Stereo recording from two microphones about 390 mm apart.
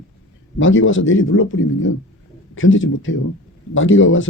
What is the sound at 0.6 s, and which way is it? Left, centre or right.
Speech, left.